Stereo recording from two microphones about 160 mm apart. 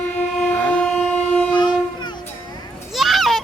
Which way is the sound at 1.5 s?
30° left (ahead or behind).